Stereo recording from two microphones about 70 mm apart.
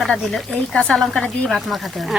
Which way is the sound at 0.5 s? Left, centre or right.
Centre.